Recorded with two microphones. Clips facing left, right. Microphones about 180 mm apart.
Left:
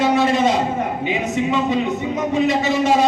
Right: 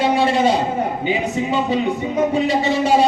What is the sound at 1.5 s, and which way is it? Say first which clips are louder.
A man's voice: right 2 dB; 30° right (ahead or behind).